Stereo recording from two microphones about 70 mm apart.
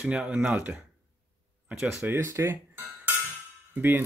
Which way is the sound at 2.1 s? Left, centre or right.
Right.